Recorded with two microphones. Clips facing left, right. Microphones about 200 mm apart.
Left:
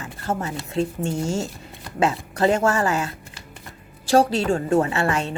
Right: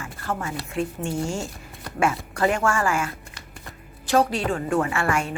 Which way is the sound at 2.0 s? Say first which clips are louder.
Left 2 dB; 20° left (ahead or behind).